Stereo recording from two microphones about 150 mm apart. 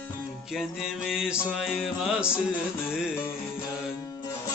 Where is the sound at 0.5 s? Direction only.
Centre (ahead or behind).